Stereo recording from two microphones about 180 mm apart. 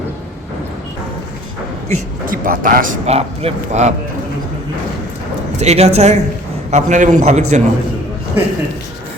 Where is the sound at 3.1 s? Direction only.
35° right (ahead or behind).